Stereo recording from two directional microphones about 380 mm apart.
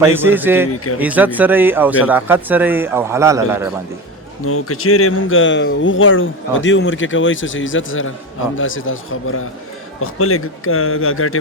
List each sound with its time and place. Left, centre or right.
0.0 s a man's voice: centre
4.4 s speech: left